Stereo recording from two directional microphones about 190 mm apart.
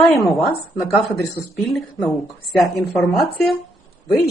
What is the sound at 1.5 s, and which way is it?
A woman's voice, centre (ahead or behind).